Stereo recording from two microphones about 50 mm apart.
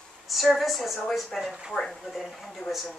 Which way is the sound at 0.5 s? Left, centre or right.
Centre.